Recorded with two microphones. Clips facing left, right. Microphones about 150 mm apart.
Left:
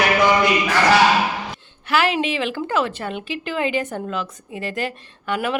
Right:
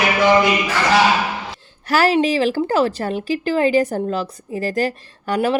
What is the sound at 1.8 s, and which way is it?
Speech, 40° right (ahead or behind).